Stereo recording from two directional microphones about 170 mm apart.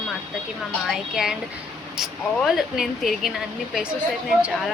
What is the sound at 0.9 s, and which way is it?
Speech, centre (ahead or behind).